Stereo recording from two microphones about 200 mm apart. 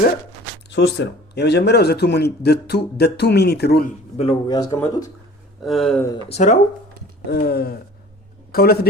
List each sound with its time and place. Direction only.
0.7 s a man's voice: 60° left (ahead or behind)
4.2 s a man's voice: 25° left (ahead or behind)
5.6 s speech: centre (ahead or behind)
6.2 s speech: 35° left (ahead or behind)
7.3 s gasp: 50° left (ahead or behind)